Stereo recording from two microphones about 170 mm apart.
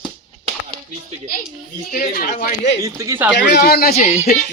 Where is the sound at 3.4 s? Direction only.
70° left (ahead or behind).